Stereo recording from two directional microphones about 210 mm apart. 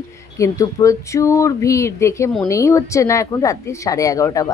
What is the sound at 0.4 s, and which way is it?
Speech, 15° left (ahead or behind).